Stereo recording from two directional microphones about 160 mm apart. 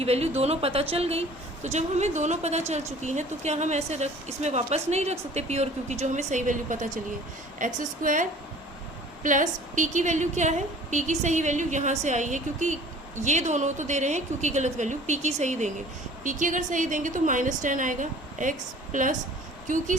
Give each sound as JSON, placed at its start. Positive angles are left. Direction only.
{"t": 0.0, "sound": "a woman's voice", "side_deg": -40}